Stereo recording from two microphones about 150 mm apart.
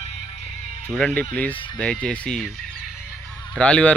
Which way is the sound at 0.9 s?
5° left (ahead or behind).